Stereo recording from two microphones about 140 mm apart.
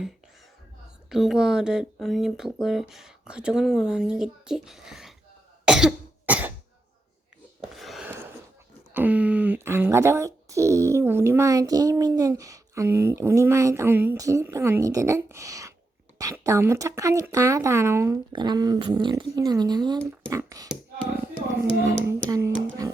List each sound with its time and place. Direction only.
1.1 s speech: 5° right (ahead or behind)
5.6 s cough: 5° right (ahead or behind)
7.6 s a sound: centre (ahead or behind)
8.9 s speech: 10° right (ahead or behind)
18.3 s speech: 30° right (ahead or behind)